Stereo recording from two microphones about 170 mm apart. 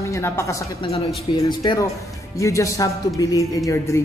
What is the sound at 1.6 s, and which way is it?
A man's voice, 25° left (ahead or behind).